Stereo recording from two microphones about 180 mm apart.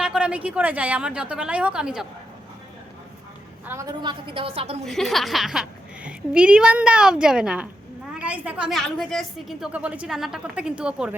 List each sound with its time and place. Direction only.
0.0 s a woman's voice: 5° right (ahead or behind)
3.7 s a woman's voice: 20° right (ahead or behind)
4.9 s a woman's voice: centre (ahead or behind)